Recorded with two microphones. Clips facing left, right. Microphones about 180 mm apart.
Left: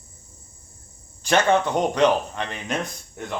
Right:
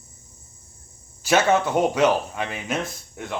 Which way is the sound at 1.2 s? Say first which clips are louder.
Even; 5° right (ahead or behind).